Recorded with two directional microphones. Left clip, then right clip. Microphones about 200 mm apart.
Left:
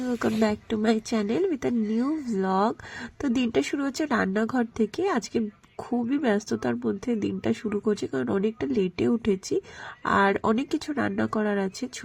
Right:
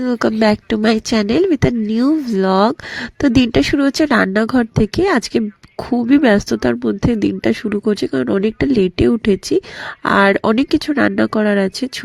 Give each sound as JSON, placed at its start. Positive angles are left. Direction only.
{"t": 0.0, "sound": "speech", "side_deg": -45}